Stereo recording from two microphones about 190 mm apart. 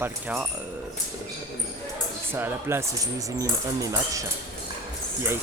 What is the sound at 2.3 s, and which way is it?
Speech, 10° right (ahead or behind).